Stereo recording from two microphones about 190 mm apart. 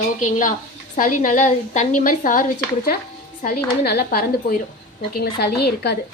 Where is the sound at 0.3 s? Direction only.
40° left (ahead or behind); by 6.0 s 60° left (ahead or behind).